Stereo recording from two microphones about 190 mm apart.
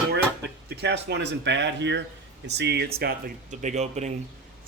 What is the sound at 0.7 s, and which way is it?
Speech, 65° right (ahead or behind).